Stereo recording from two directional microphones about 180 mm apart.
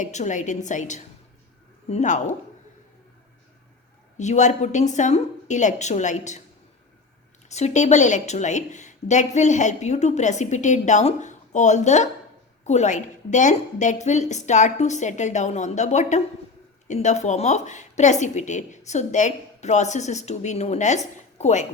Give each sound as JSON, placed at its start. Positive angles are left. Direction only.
{"t": 0.0, "sound": "a woman's voice", "side_deg": 40}
{"t": 4.2, "sound": "a woman's voice", "side_deg": 40}
{"t": 7.4, "sound": "a woman's voice", "side_deg": 40}